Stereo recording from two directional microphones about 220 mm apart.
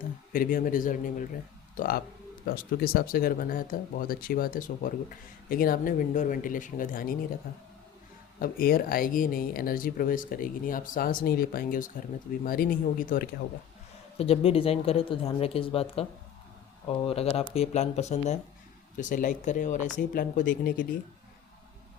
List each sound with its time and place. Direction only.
0.3 s speech: 40° left (ahead or behind)
8.4 s speech: 40° left (ahead or behind)
14.2 s speech: 25° left (ahead or behind)